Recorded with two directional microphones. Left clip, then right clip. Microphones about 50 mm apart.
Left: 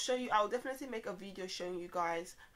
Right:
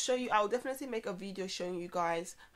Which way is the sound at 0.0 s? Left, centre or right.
Right.